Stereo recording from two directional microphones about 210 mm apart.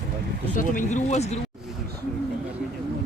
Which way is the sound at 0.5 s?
40° left (ahead or behind).